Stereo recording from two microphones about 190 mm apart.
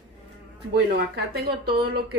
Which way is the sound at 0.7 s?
55° right (ahead or behind).